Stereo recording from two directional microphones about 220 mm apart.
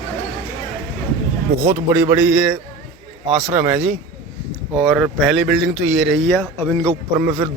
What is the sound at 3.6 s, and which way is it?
Speech, 5° right (ahead or behind).